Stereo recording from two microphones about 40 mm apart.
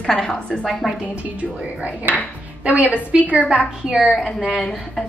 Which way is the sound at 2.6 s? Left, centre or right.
Right.